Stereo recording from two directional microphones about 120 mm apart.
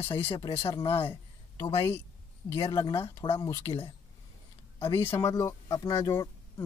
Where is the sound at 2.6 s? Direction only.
30° left (ahead or behind).